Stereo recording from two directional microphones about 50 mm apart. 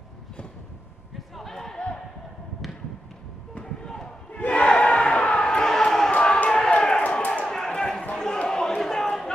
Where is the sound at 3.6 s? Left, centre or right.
Centre.